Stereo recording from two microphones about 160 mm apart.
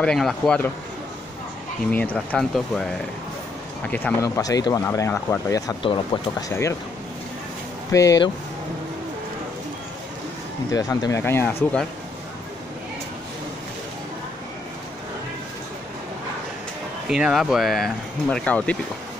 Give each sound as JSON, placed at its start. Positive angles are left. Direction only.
{"t": 0.0, "sound": "speech", "side_deg": 5}
{"t": 1.9, "sound": "speech", "side_deg": 10}
{"t": 4.4, "sound": "speech", "side_deg": 25}
{"t": 7.9, "sound": "speech", "side_deg": 20}
{"t": 10.7, "sound": "speech", "side_deg": 20}
{"t": 17.1, "sound": "speech", "side_deg": -5}